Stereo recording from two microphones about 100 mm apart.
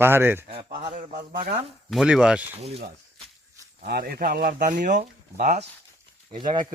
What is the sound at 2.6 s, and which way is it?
Speech, 90° right.